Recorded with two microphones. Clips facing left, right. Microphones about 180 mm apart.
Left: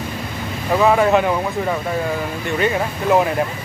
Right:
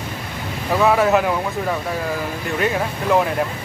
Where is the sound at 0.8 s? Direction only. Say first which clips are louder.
Left 1 dB; centre (ahead or behind).